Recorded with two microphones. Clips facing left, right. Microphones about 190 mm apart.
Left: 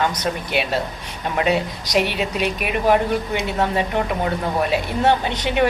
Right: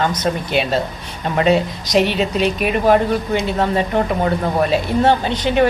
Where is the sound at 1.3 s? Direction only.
10° left (ahead or behind).